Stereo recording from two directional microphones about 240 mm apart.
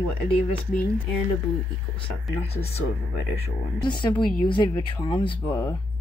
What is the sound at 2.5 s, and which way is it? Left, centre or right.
Speech, left.